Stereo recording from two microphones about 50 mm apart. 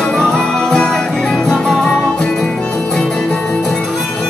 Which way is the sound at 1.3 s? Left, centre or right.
Centre.